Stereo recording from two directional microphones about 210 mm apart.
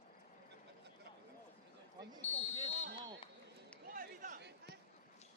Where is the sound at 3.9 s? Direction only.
40° right (ahead or behind).